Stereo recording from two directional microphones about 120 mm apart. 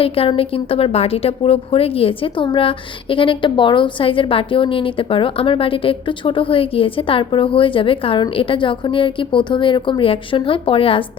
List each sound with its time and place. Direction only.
0.0 s a woman's voice: 50° left (ahead or behind)